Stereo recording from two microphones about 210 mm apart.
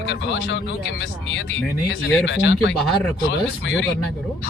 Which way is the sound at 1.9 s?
70° left (ahead or behind).